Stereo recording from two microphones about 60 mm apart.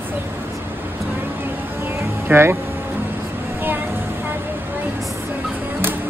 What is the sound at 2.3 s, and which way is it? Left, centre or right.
Speech, right.